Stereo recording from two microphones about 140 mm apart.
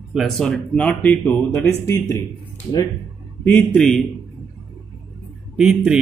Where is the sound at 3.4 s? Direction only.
10° left (ahead or behind).